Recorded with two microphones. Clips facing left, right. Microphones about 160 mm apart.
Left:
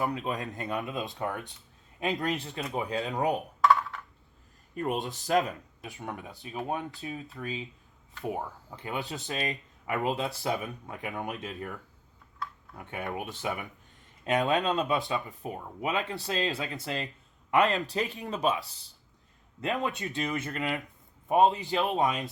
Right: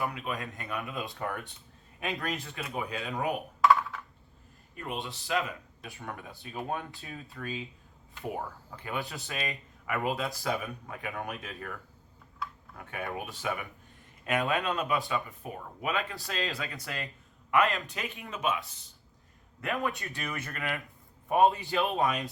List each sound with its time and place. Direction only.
0.0 s speech: 35° left (ahead or behind)
3.6 s computer keyboard: centre (ahead or behind)
4.7 s speech: 40° left (ahead or behind)
5.8 s speech: 20° left (ahead or behind)
12.7 s speech: 20° left (ahead or behind)
19.6 s speech: 20° left (ahead or behind)